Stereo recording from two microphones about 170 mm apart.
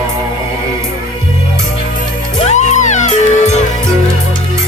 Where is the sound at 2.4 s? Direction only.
45° left (ahead or behind).